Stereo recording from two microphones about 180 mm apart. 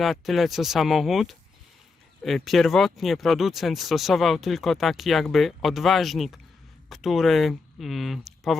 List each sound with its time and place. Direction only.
0.0 s speech: centre (ahead or behind)